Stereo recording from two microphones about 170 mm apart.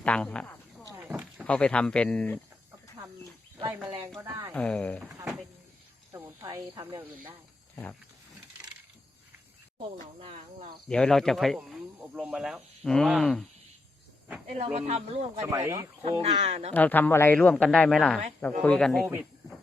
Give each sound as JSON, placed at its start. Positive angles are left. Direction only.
{"t": 0.0, "sound": "a sound", "side_deg": 5}
{"t": 0.9, "sound": "a sound", "side_deg": -10}
{"t": 1.5, "sound": "a man's voice", "side_deg": 5}
{"t": 4.2, "sound": "speech", "side_deg": -15}
{"t": 4.5, "sound": "speech", "side_deg": 5}
{"t": 6.1, "sound": "speech", "side_deg": -20}
{"t": 10.2, "sound": "speech", "side_deg": -35}
{"t": 10.8, "sound": "speech", "side_deg": 5}
{"t": 14.4, "sound": "speech", "side_deg": -40}
{"t": 15.4, "sound": "speech", "side_deg": -15}
{"t": 16.0, "sound": "speech", "side_deg": -40}
{"t": 16.7, "sound": "a man's voice", "side_deg": 10}